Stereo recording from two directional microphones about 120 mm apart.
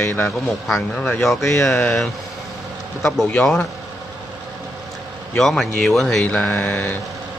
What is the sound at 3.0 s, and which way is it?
Speech, 5° left (ahead or behind).